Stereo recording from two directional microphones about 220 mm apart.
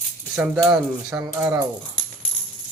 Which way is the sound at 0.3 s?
5° right (ahead or behind).